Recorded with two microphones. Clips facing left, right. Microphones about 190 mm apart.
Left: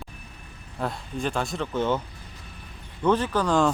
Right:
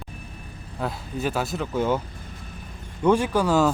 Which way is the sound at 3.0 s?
10° right (ahead or behind).